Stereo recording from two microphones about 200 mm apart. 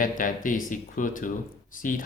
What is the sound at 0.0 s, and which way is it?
Speech, 40° left (ahead or behind).